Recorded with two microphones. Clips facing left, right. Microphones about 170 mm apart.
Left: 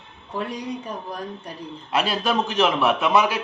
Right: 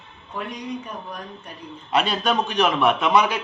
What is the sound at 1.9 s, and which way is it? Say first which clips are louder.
Speech: right 1 dB; 5° left (ahead or behind).